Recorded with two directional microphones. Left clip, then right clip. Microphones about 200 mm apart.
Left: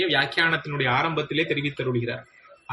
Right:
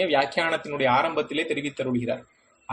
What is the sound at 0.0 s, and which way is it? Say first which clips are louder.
Speech: left 1 dB; 50° right (ahead or behind).